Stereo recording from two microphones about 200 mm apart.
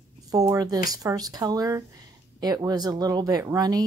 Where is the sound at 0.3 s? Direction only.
15° right (ahead or behind).